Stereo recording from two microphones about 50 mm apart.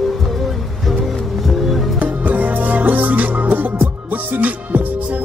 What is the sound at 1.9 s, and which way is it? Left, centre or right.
Music, right.